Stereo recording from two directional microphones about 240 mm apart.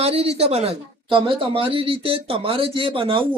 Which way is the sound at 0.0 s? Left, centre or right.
Right.